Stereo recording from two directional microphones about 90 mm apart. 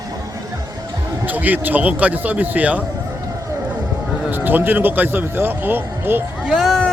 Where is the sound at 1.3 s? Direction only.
20° right (ahead or behind).